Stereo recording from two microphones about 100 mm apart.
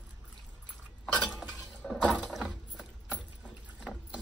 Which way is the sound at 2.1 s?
10° left (ahead or behind).